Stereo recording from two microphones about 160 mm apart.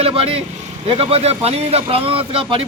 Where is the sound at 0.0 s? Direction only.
35° right (ahead or behind).